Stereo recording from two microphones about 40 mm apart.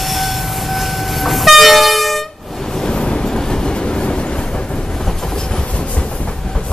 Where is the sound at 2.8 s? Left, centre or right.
Left.